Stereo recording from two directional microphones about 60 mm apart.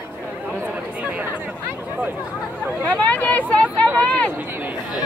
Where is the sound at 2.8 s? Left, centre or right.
Left.